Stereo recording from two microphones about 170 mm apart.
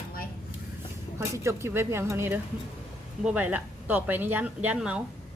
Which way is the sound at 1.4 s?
15° right (ahead or behind).